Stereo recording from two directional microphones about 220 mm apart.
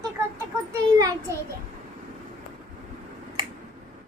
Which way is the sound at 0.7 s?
15° right (ahead or behind).